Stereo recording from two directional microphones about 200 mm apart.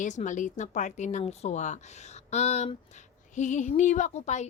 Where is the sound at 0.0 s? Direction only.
40° left (ahead or behind).